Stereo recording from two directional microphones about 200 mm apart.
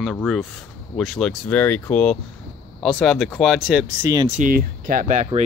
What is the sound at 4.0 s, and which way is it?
Speech, 15° right (ahead or behind).